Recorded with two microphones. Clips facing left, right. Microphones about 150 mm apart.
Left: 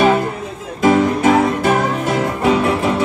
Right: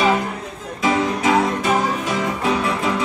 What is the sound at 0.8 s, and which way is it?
Music, 55° left (ahead or behind).